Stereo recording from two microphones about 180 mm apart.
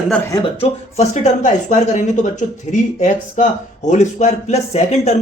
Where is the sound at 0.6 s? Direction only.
40° left (ahead or behind).